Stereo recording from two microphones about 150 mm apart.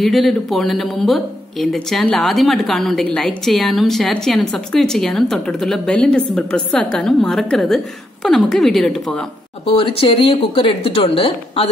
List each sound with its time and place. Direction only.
0.0 s speech: centre (ahead or behind)
9.7 s a woman's voice: 35° left (ahead or behind)